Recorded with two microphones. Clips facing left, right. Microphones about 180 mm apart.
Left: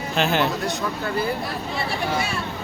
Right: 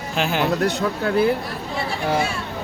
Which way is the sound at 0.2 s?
10° right (ahead or behind).